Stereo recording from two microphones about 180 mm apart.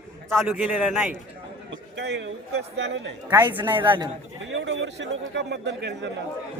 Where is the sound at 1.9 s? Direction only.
75° right (ahead or behind).